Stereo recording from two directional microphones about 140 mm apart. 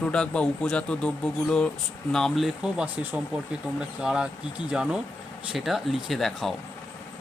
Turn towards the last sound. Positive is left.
turn(degrees=0)  # may be behind; listen again after turning